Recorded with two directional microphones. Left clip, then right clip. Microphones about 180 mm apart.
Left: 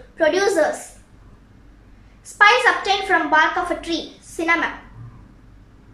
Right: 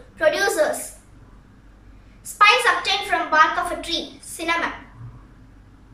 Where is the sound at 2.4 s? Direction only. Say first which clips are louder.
Left 1 dB; 35° left (ahead or behind).